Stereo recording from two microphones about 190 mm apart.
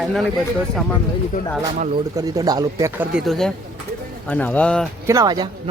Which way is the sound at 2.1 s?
20° right (ahead or behind).